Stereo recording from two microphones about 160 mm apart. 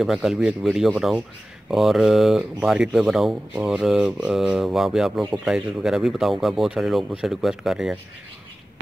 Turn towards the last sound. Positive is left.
turn(degrees=-5)  # may be behind; listen again after turning